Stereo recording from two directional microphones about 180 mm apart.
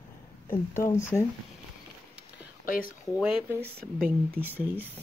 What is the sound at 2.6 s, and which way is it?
Speech, 50° left (ahead or behind).